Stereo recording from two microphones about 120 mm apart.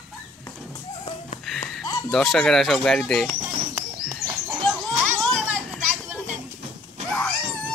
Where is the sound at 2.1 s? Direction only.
5° left (ahead or behind).